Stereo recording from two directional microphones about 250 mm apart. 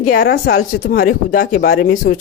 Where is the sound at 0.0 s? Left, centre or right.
Left.